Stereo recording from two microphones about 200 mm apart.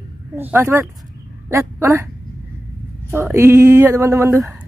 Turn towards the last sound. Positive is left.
turn(degrees=-15)  # may be behind; listen again after turning